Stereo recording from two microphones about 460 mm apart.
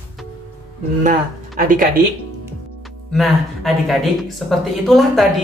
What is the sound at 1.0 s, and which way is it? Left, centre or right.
Speech, centre.